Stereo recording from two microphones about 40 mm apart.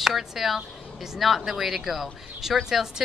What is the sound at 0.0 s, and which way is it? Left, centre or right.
A woman's voice, centre.